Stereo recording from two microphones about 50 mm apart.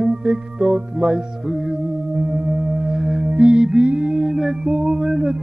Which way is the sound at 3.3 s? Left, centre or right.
Right.